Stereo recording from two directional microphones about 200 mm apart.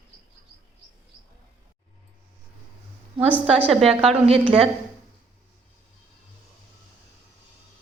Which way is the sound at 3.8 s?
30° right (ahead or behind).